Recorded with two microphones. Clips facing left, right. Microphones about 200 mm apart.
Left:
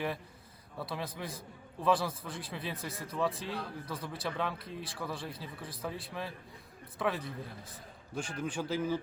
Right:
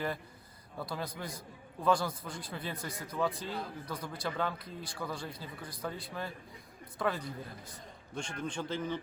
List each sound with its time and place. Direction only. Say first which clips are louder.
0.8 s a man's voice: even; centre (ahead or behind)
8.4 s a man's voice: left 3 dB; 10° left (ahead or behind)